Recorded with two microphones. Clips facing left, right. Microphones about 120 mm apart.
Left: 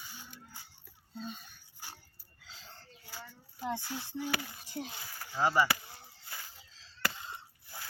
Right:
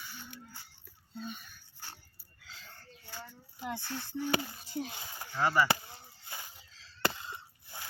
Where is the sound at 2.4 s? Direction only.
30° left (ahead or behind).